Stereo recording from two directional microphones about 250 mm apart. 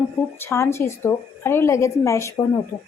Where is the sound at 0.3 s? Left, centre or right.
Centre.